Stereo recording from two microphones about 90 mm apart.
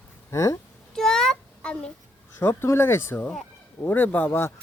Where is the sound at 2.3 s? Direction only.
25° left (ahead or behind).